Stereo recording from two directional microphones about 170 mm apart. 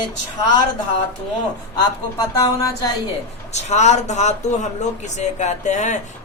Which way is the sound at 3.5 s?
40° left (ahead or behind).